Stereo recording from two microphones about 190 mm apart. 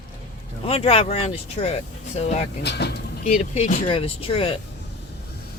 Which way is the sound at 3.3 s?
35° left (ahead or behind).